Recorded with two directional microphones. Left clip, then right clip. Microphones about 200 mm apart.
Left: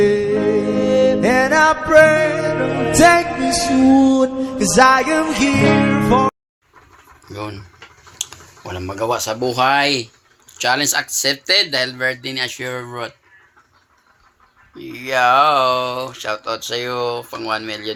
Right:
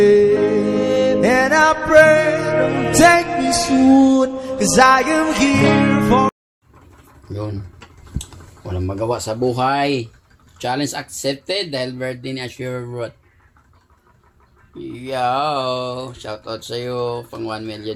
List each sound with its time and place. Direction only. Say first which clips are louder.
0.0 s music: right 3 dB; centre (ahead or behind)
7.3 s speech: even; centre (ahead or behind)
15.0 s speech: left 6 dB; 30° left (ahead or behind)
17.4 s speech: left 7 dB; centre (ahead or behind)